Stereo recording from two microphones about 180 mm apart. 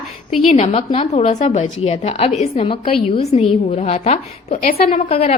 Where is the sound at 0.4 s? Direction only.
35° left (ahead or behind).